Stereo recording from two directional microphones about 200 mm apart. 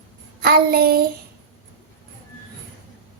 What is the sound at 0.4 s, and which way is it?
Speech, 50° right (ahead or behind).